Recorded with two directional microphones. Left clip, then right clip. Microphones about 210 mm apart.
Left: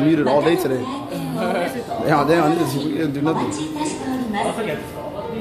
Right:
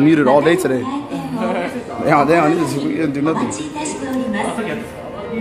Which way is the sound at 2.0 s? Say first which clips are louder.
Right 4 dB; 15° right (ahead or behind).